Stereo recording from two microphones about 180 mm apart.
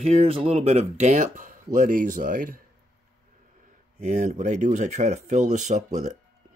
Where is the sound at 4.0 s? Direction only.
45° right (ahead or behind).